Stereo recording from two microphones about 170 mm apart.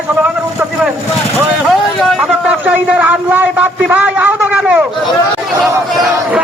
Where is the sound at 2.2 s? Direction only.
10° right (ahead or behind).